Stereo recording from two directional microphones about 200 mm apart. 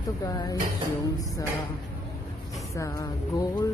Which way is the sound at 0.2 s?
20° left (ahead or behind).